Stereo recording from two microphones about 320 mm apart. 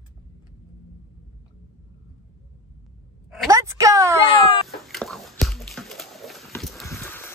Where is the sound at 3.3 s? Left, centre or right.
Centre.